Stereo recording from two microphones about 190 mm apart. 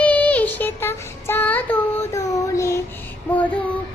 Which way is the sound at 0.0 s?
10° left (ahead or behind).